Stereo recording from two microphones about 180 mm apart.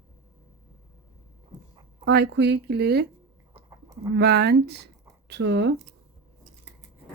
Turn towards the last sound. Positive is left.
turn(degrees=-70)  # may be behind; listen again after turning